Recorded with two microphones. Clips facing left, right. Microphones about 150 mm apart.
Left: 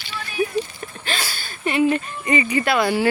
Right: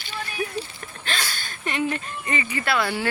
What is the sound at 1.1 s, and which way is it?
Speech, 5° left (ahead or behind).